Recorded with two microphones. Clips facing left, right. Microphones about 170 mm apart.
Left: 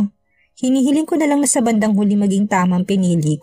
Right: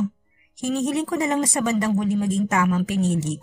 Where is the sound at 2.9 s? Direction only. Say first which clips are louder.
Left 7 dB; 80° left.